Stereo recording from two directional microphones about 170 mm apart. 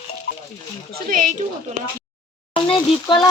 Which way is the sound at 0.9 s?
55° right (ahead or behind).